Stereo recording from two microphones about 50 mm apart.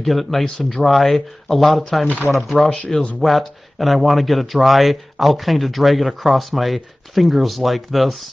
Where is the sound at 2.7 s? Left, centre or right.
Left.